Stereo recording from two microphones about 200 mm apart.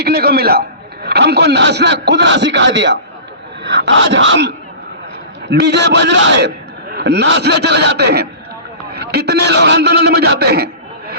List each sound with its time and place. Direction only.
0.0 s a man's voice: 50° right (ahead or behind)